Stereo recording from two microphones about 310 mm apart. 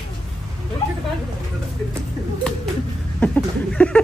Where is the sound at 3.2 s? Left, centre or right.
Centre.